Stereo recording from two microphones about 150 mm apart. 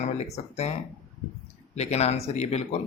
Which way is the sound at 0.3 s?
45° left (ahead or behind).